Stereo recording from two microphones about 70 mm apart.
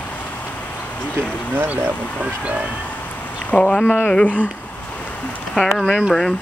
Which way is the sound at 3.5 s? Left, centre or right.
Centre.